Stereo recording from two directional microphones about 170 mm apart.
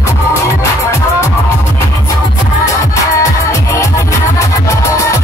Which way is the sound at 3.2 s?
20° left (ahead or behind).